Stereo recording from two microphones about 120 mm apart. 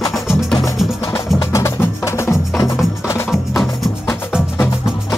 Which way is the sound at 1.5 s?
25° left (ahead or behind).